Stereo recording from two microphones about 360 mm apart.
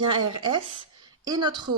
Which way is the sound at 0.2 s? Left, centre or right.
Right.